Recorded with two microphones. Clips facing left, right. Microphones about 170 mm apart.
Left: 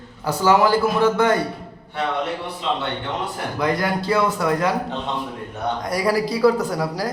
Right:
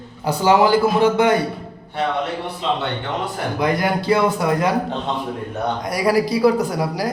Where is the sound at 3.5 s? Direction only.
15° right (ahead or behind).